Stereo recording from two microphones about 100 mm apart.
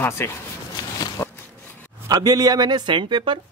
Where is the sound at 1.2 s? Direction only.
25° left (ahead or behind).